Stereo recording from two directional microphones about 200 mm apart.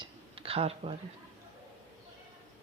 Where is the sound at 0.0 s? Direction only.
30° right (ahead or behind).